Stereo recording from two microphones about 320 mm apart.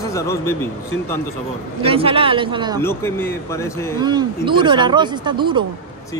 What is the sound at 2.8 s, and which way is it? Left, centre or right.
A man's voice, centre.